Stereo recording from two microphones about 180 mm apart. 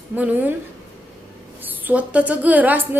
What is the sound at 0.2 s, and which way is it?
Speech, 10° right (ahead or behind).